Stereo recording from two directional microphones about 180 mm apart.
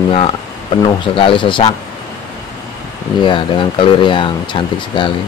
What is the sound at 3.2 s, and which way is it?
A man's voice, 25° left (ahead or behind).